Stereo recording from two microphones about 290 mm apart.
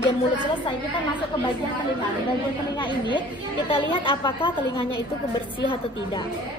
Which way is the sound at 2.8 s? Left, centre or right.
Centre.